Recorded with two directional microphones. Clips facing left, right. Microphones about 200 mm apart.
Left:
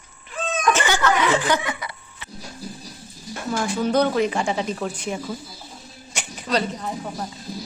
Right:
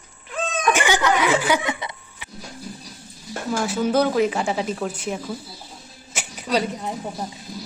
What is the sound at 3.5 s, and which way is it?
Speech, 5° right (ahead or behind).